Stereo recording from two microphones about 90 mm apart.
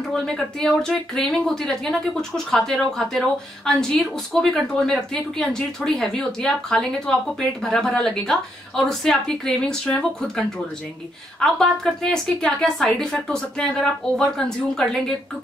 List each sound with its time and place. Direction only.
0.1 s speech: 5° left (ahead or behind)